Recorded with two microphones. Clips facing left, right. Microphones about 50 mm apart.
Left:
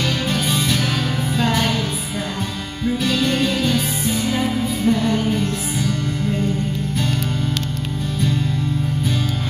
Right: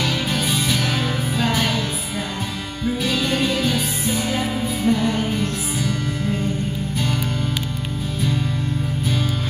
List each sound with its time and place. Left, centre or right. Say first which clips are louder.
0.0 s music: left 1 dB; centre
3.0 s music: left 2 dB; centre